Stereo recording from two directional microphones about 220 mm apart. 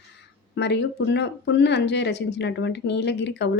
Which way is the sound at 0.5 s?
50° left (ahead or behind).